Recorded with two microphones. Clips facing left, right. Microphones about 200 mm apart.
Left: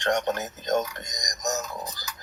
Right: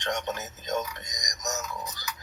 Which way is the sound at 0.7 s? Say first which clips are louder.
Left 5 dB; 45° left (ahead or behind).